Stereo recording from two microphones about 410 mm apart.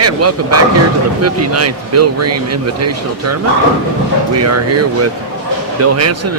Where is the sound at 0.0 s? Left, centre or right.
Right.